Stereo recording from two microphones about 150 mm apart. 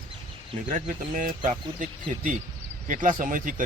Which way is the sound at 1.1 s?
60° right (ahead or behind).